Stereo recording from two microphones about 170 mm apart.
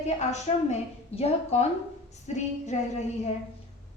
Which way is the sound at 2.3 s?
40° left (ahead or behind).